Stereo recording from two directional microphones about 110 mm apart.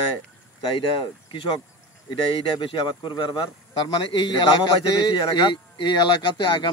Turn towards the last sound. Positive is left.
turn(degrees=40)  # may be behind; listen again after turning